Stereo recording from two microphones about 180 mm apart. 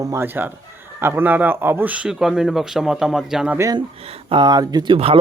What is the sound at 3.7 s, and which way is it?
Speech, 30° right (ahead or behind).